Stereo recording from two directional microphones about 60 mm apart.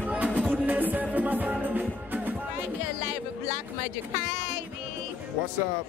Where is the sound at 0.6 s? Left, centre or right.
Right.